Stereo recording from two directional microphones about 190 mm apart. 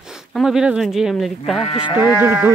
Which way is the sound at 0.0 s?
Centre (ahead or behind).